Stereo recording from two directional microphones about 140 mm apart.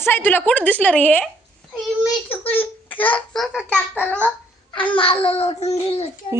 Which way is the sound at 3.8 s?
10° left (ahead or behind).